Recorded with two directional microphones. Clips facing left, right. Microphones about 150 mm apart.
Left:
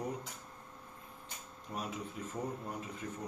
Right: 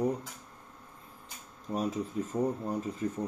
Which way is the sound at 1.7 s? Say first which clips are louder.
Right 9 dB; 40° right (ahead or behind).